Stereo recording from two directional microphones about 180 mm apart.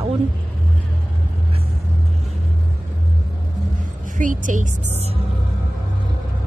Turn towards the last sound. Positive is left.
turn(degrees=-40)  # may be behind; listen again after turning